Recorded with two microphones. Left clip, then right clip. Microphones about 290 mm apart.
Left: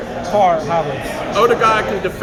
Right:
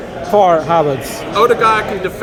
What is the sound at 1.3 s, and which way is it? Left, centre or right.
Speech, centre.